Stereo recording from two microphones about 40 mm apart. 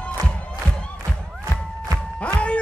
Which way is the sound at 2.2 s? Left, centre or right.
Left.